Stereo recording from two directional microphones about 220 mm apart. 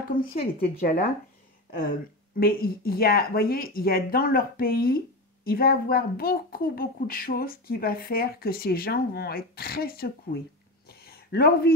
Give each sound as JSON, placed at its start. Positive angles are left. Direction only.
{"t": 0.1, "sound": "speech", "side_deg": 20}
{"t": 0.6, "sound": "speech", "side_deg": 40}
{"t": 2.4, "sound": "speech", "side_deg": 45}
{"t": 10.9, "sound": "a sound", "side_deg": 45}